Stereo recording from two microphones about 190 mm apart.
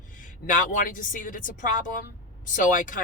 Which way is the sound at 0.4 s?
45° left (ahead or behind).